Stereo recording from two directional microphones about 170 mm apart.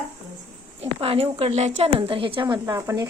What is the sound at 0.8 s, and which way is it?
A woman's voice, 35° right (ahead or behind).